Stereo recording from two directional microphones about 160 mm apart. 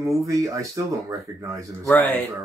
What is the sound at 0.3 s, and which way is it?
Speech, 20° right (ahead or behind).